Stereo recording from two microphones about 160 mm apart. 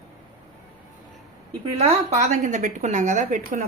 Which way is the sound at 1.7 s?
45° right (ahead or behind).